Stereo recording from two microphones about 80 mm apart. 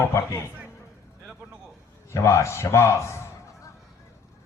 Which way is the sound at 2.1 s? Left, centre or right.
Left.